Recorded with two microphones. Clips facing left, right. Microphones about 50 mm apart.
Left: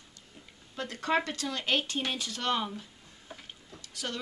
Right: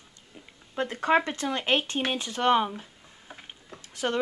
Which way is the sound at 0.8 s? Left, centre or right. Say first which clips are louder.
Right 6 dB; right.